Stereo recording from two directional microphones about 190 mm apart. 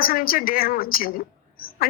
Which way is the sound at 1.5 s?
50° left (ahead or behind).